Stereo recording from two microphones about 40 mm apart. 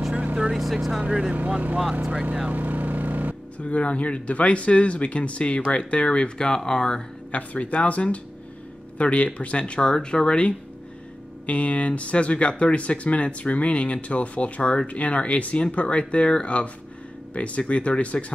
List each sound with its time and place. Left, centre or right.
0.1 s vehicle: right
0.6 s speech: centre
1.0 s speech: right
2.5 s a sound: right
3.5 s speech: left; by 7.0 s centre
7.2 s speech: left
11.4 s speech: left